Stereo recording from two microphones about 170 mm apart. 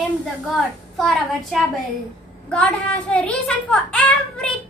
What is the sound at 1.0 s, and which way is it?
Speech, centre (ahead or behind).